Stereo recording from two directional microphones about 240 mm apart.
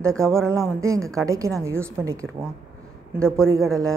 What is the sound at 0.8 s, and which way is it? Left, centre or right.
Speech, centre.